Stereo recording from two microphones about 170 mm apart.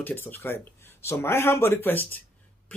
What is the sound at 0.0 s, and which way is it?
Speech, 10° left (ahead or behind).